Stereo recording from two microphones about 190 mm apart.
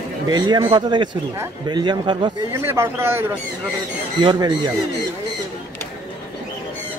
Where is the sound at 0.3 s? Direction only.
20° right (ahead or behind).